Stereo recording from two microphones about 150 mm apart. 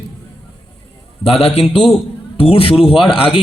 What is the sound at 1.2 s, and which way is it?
A man's voice, 40° left (ahead or behind).